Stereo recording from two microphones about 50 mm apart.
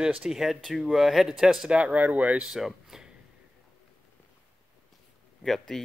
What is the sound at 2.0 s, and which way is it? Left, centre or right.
Speech, right.